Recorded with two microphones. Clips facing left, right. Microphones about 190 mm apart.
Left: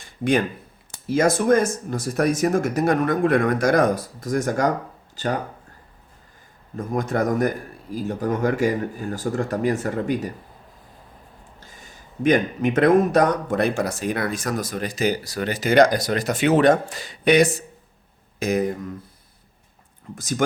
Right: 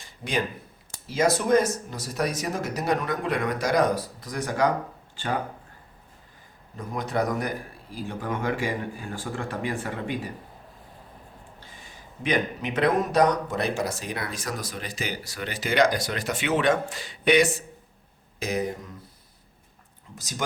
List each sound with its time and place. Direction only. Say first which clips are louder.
0.0 s a sound: left 8 dB; 55° left (ahead or behind)
0.9 s speech: left 4 dB; 50° left (ahead or behind)
6.7 s speech: left 4 dB; 45° left (ahead or behind)
11.6 s speech: left 1 dB; 45° left (ahead or behind)
20.1 s speech: left 11 dB; 55° left (ahead or behind)